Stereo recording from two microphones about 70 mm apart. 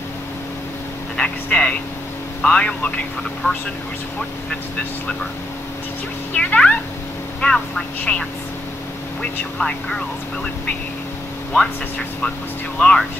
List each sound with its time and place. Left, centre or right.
1.1 s speech: centre
3.4 s speech: left
6.3 s speech: centre
9.6 s speech: centre
12.7 s speech: centre